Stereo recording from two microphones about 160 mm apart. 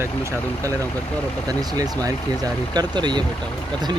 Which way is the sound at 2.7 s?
25° right (ahead or behind).